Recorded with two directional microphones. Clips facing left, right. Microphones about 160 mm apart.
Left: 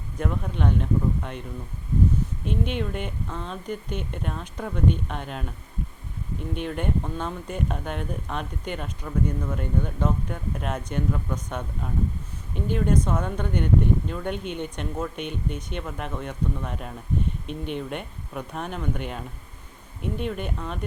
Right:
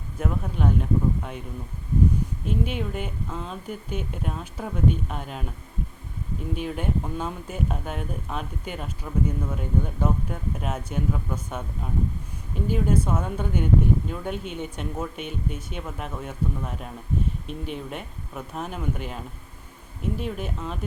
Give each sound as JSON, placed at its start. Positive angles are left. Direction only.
{"t": 0.2, "sound": "speech", "side_deg": -5}
{"t": 6.5, "sound": "speech", "side_deg": -5}